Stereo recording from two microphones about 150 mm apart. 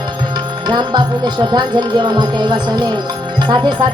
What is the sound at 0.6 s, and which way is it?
Music, 30° right (ahead or behind).